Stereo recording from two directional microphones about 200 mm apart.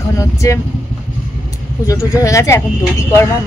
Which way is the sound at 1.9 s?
15° left (ahead or behind).